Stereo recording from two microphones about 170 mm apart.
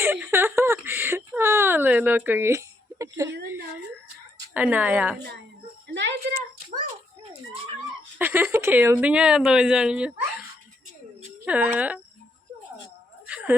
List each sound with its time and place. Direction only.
0.0 s speech: 15° right (ahead or behind)
4.5 s speech: 10° right (ahead or behind)
5.9 s speech: 90° right
8.2 s speech: 10° right (ahead or behind)
11.4 s speech: 10° right (ahead or behind)
13.2 s a sound: 10° right (ahead or behind)